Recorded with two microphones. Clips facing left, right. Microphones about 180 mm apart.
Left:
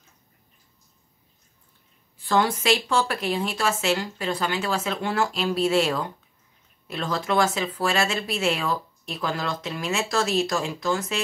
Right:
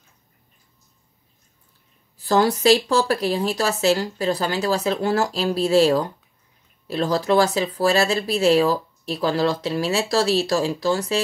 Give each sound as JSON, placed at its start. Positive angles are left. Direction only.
{"t": 2.1, "sound": "speech", "side_deg": -40}